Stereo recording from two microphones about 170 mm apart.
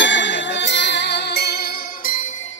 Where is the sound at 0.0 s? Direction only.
90° left; by 2.3 s 55° left (ahead or behind).